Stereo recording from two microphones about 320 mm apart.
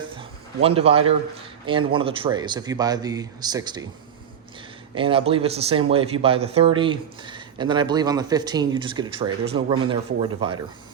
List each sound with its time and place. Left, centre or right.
0.0 s a sound: centre
1.9 s speech: centre
4.9 s speech: centre